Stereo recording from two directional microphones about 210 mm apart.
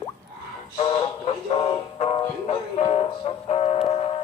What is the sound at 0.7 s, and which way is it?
Speech, 25° left (ahead or behind).